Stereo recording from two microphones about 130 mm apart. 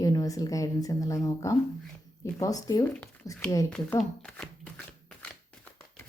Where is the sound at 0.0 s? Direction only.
30° left (ahead or behind).